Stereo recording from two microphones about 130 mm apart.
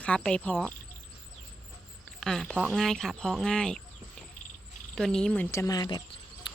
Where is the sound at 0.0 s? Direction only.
10° left (ahead or behind).